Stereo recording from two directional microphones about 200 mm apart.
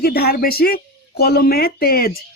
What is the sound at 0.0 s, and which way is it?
Speech, 50° left (ahead or behind).